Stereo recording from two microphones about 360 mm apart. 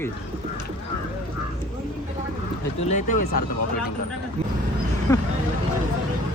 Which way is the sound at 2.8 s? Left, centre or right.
Centre.